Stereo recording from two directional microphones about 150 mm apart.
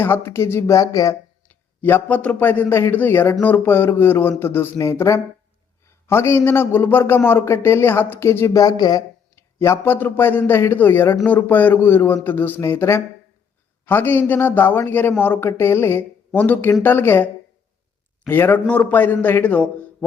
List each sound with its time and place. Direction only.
0.0 s speech: 15° left (ahead or behind)
1.5 s a man's voice: 10° left (ahead or behind)
18.3 s speech: 15° left (ahead or behind)